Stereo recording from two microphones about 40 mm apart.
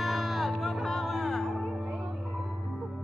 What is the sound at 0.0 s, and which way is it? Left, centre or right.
Music, centre.